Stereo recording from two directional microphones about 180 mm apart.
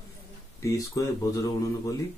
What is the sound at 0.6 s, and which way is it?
Speech, 20° left (ahead or behind).